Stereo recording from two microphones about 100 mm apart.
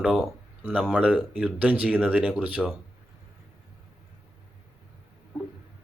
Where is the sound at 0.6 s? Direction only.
20° right (ahead or behind).